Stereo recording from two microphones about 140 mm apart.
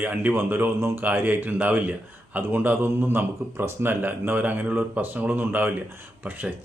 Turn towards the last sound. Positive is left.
turn(degrees=-10)  # may be behind; listen again after turning